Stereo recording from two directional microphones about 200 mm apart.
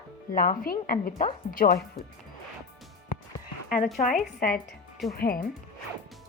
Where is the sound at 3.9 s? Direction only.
40° left (ahead or behind).